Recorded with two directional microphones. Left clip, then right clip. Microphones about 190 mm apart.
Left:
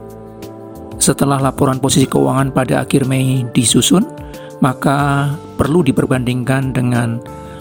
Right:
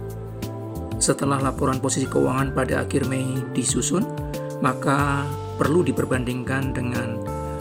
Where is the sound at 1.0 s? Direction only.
45° left (ahead or behind).